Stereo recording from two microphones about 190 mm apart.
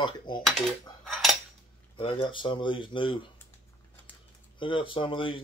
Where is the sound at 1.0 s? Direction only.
Centre (ahead or behind).